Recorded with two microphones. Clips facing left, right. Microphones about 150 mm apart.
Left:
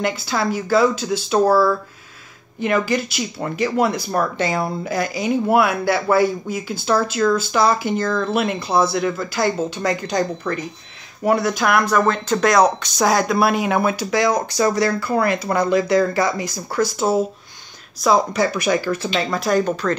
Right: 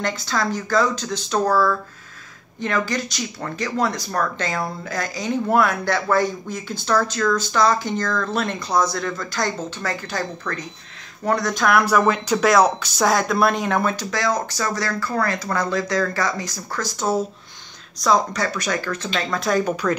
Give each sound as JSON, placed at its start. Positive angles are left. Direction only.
{"t": 0.0, "sound": "speech", "side_deg": 10}
{"t": 2.6, "sound": "speech", "side_deg": 10}
{"t": 12.1, "sound": "speech", "side_deg": -5}
{"t": 19.6, "sound": "speech", "side_deg": -10}